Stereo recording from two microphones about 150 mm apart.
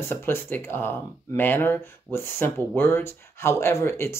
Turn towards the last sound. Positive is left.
turn(degrees=15)  # may be behind; listen again after turning